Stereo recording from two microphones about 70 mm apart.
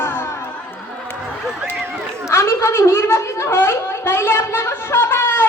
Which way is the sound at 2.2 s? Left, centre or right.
Left.